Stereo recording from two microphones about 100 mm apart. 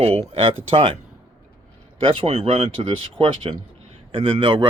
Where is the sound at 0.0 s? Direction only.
70° right (ahead or behind).